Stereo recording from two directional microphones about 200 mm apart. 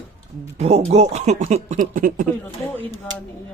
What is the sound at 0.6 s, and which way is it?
Speech, 30° right (ahead or behind).